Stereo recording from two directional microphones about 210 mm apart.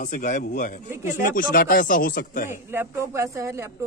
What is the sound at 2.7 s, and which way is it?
Speech, 15° right (ahead or behind).